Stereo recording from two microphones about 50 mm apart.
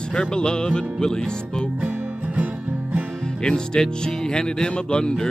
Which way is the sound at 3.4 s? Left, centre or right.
Centre.